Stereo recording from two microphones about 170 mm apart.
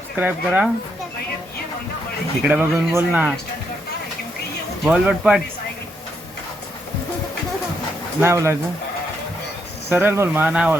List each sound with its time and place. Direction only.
0.2 s speech: 10° right (ahead or behind)
2.4 s speech: 10° right (ahead or behind)
4.9 s speech: 5° right (ahead or behind)
8.2 s speech: 15° right (ahead or behind)
9.9 s speech: 10° right (ahead or behind)